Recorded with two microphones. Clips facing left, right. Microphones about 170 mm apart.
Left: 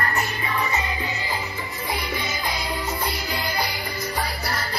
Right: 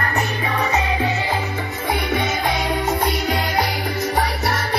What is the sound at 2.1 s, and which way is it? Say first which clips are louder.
Music: right 8 dB; 70° right (ahead or behind).